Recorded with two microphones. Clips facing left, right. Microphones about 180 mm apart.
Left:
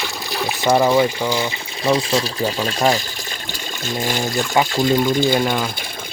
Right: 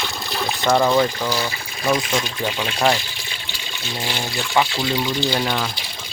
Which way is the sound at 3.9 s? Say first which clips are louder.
Left 5 dB; 45° left (ahead or behind).